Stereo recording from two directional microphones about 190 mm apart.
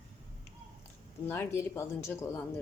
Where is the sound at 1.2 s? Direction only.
15° left (ahead or behind).